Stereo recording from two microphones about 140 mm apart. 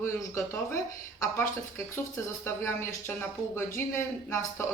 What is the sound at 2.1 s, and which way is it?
Speech, 20° left (ahead or behind).